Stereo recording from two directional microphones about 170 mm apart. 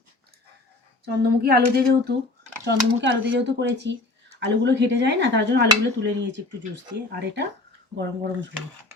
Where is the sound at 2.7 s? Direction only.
90° right.